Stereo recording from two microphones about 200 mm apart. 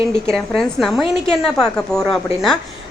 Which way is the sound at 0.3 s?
Centre (ahead or behind).